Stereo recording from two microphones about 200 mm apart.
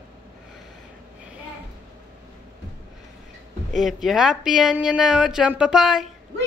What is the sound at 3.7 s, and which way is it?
Speech, centre (ahead or behind).